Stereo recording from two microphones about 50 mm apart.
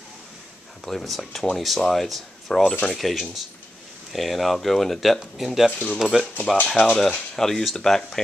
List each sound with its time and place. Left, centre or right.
0.8 s speech: centre
5.7 s speech: left
5.9 s speech: centre
6.7 s speech: centre